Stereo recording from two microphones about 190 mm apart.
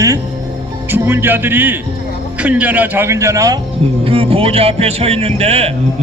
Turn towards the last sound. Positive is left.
turn(degrees=-30)  # may be behind; listen again after turning